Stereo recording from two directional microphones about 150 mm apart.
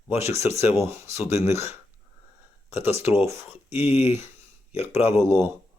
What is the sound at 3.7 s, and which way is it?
Speech, 45° left (ahead or behind).